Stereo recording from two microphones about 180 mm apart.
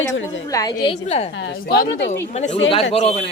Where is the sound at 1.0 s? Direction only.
35° left (ahead or behind).